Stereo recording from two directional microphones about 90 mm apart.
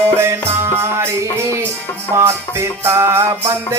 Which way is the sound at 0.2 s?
30° right (ahead or behind).